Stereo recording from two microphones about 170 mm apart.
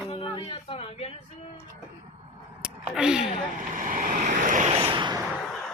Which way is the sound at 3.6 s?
50° right (ahead or behind).